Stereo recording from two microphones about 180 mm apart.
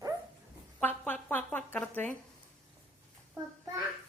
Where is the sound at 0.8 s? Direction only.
10° left (ahead or behind).